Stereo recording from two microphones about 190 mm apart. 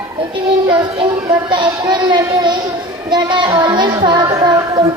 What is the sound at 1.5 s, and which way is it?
A man's voice, 25° right (ahead or behind).